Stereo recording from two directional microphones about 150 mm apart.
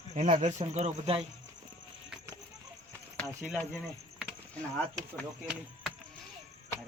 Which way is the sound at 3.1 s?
Centre (ahead or behind).